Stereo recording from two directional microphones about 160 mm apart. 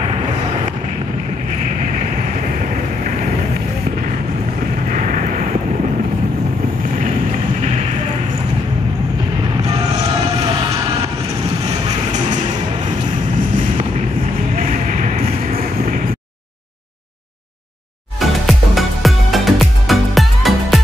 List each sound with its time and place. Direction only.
14.6 s vehicle: 60° right (ahead or behind)
18.2 s music: centre (ahead or behind)